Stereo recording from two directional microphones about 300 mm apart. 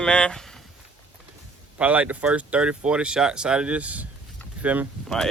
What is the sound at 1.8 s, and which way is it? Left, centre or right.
Speech, centre.